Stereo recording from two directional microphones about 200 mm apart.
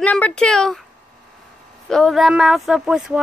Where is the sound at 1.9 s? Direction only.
Centre (ahead or behind).